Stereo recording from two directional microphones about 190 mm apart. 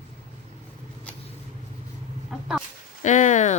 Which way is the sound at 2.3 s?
Centre (ahead or behind).